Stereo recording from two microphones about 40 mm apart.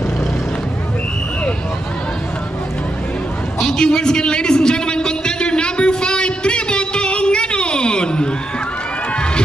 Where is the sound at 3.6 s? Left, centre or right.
Centre.